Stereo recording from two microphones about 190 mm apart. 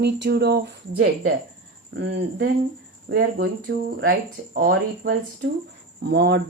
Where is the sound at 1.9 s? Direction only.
65° right (ahead or behind).